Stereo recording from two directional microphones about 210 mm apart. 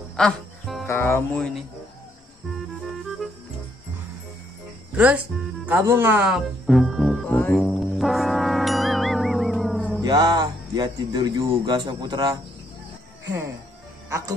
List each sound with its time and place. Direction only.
0.1 s music: centre (ahead or behind)
4.9 s speech: 5° right (ahead or behind)
5.7 s music: 10° right (ahead or behind)
10.0 s speech: 20° right (ahead or behind)
14.0 s speech: 15° right (ahead or behind)